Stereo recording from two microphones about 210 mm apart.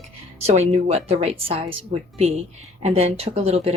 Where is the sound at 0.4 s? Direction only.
30° right (ahead or behind).